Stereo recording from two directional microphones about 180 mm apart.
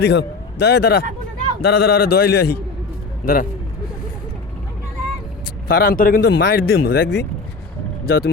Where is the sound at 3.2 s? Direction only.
50° left (ahead or behind).